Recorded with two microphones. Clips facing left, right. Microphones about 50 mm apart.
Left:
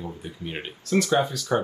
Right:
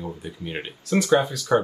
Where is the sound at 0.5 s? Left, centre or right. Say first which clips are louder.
Even; centre.